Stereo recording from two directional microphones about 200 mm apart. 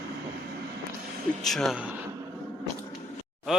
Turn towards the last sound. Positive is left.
turn(degrees=0)  # may be behind; listen again after turning